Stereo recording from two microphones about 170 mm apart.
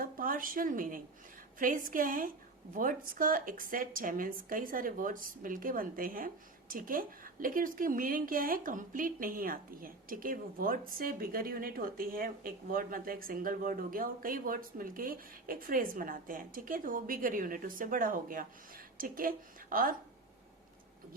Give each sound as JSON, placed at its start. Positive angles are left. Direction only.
{"t": 0.0, "sound": "a woman's voice", "side_deg": -55}